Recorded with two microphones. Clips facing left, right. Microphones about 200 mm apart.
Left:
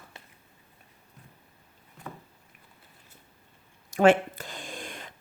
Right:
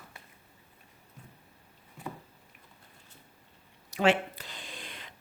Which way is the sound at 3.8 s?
50° left (ahead or behind).